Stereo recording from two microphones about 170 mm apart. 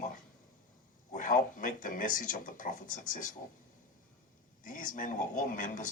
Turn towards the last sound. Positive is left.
turn(degrees=50)  # may be behind; listen again after turning